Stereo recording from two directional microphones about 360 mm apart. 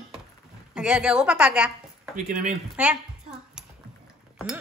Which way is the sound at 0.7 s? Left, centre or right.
Centre.